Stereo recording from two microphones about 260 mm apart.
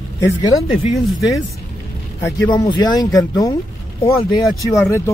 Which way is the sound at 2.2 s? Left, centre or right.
Centre.